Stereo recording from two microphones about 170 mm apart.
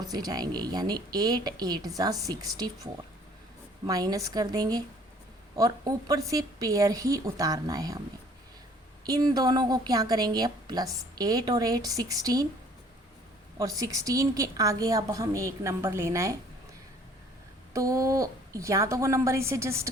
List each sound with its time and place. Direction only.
0.0 s a woman's voice: 20° right (ahead or behind)
9.0 s a woman's voice: 20° right (ahead or behind)
13.6 s a woman's voice: 20° right (ahead or behind)
17.7 s a woman's voice: 20° right (ahead or behind)